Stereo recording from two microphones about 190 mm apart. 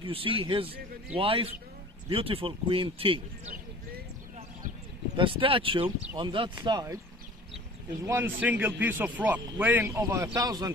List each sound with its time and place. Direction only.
0.0 s speech: 30° right (ahead or behind)
5.1 s speech: 25° right (ahead or behind)
8.0 s speech: 15° right (ahead or behind)